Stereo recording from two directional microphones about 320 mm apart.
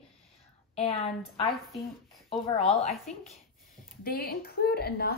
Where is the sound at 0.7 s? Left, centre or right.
Centre.